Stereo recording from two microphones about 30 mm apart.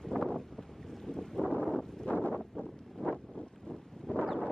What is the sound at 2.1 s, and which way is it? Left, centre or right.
Wind noise, left.